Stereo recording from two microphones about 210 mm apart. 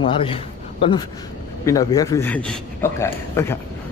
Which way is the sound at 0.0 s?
25° left (ahead or behind).